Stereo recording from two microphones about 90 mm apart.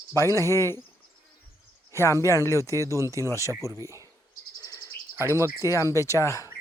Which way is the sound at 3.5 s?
30° right (ahead or behind).